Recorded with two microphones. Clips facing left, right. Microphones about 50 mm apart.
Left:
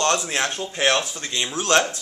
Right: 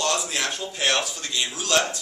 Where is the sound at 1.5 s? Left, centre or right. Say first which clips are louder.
Left 5 dB; left.